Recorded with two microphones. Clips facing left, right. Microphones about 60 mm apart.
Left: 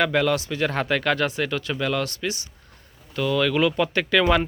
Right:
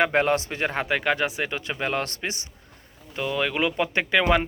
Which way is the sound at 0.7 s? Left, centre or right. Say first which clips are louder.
Even; centre.